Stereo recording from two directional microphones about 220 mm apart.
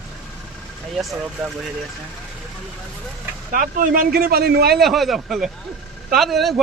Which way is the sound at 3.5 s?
35° right (ahead or behind).